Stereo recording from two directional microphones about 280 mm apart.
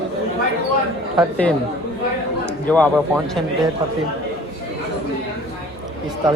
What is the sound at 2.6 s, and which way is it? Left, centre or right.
Speech, centre.